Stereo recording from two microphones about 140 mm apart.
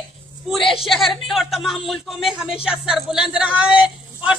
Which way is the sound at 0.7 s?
Centre (ahead or behind).